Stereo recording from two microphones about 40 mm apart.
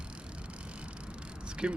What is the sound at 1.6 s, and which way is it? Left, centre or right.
Speech, right.